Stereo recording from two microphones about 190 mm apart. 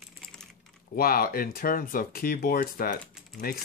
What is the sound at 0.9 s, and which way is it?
Speech, 50° left (ahead or behind).